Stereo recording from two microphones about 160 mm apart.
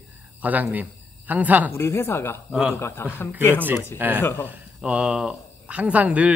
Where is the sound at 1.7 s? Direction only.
15° left (ahead or behind).